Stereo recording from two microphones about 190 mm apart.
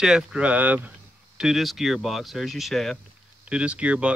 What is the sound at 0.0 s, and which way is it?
Speech, 5° right (ahead or behind).